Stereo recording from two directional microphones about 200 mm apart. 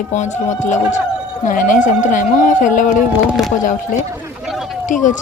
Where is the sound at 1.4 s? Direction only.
40° left (ahead or behind).